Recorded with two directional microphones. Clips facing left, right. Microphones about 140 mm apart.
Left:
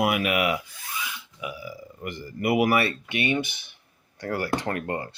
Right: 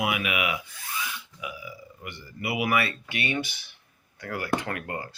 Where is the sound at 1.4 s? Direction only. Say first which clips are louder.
Left 6 dB; 35° left (ahead or behind).